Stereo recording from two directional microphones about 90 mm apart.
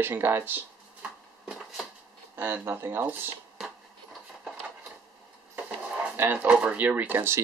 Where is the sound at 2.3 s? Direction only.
25° right (ahead or behind).